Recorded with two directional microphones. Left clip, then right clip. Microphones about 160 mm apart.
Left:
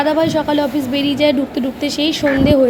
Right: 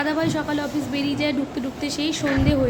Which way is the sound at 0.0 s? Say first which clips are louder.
Left 8 dB; 20° left (ahead or behind).